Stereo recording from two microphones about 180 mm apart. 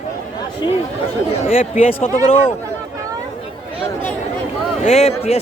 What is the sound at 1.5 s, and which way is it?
Speech, 35° left (ahead or behind).